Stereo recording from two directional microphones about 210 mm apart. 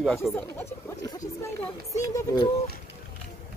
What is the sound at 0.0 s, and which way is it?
Speech, centre (ahead or behind).